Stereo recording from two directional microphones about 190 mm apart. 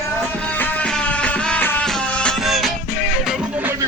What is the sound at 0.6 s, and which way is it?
Music, 10° left (ahead or behind).